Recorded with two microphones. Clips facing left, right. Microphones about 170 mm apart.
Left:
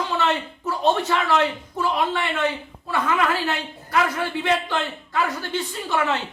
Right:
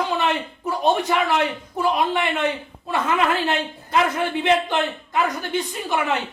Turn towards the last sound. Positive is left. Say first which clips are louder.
# even
turn(degrees=-15)  # may be behind; listen again after turning